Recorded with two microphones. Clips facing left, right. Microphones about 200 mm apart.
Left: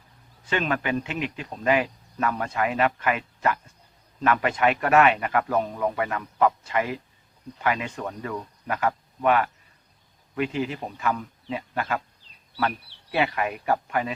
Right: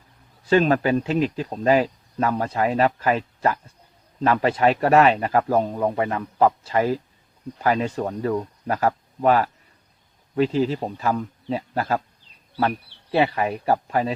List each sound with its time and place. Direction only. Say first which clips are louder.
0.4 s speech: right 8 dB; 35° right (ahead or behind)